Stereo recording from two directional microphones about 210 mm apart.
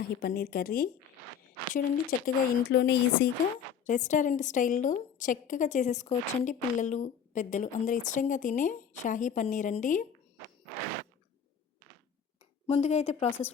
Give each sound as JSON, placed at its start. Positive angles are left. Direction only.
{"t": 0.0, "sound": "speech", "side_deg": 45}
{"t": 3.8, "sound": "a woman's voice", "side_deg": 35}
{"t": 12.6, "sound": "a woman's voice", "side_deg": 30}